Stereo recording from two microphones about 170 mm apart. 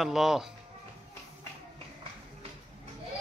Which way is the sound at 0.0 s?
Centre (ahead or behind).